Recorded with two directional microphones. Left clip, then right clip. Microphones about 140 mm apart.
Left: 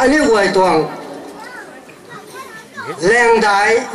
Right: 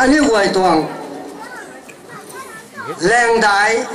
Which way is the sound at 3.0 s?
25° right (ahead or behind).